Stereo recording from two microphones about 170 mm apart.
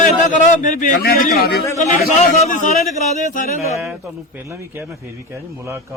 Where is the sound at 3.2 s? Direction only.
50° left (ahead or behind).